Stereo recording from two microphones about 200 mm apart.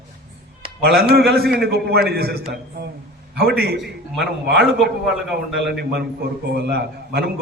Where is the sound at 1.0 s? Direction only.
50° right (ahead or behind).